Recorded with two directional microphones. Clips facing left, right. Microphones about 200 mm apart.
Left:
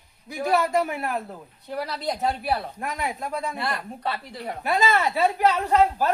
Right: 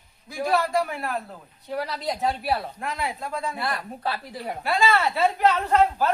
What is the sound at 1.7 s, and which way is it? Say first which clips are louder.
Speech: even; centre (ahead or behind).